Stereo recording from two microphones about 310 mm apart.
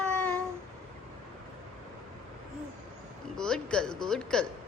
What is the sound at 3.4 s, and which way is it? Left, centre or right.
Speech, centre.